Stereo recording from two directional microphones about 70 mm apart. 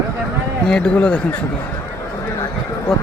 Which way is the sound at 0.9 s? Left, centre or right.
Centre.